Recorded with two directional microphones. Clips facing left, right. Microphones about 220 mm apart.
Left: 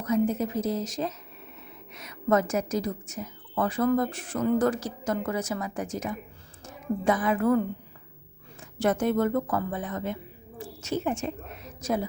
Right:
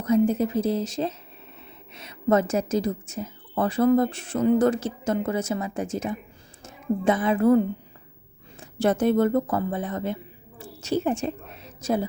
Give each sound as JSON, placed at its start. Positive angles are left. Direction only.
{"t": 0.0, "sound": "a woman's voice", "side_deg": -30}
{"t": 8.8, "sound": "a woman's voice", "side_deg": -30}
{"t": 10.6, "sound": "a sound", "side_deg": -35}